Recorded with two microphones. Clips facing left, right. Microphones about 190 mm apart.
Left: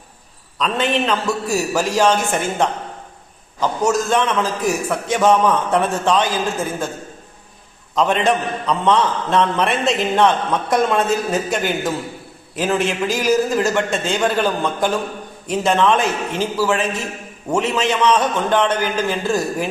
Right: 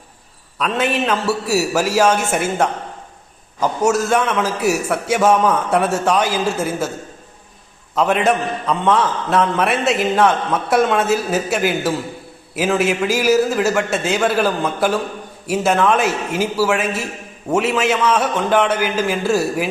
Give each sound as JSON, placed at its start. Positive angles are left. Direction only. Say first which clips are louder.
{"t": 0.6, "sound": "a man's voice", "louder": "even", "side_deg": -10}
{"t": 7.9, "sound": "a man's voice", "louder": "right 1 dB", "side_deg": -5}